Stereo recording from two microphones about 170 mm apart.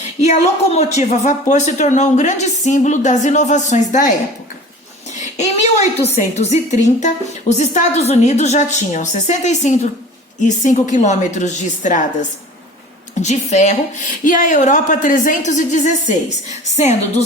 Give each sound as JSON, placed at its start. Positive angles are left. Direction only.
{"t": 0.2, "sound": "a woman's voice", "side_deg": 45}
{"t": 5.4, "sound": "a woman's voice", "side_deg": 40}
{"t": 13.1, "sound": "a woman's voice", "side_deg": 45}